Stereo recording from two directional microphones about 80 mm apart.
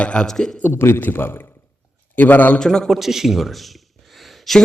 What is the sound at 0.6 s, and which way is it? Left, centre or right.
A man's voice, left.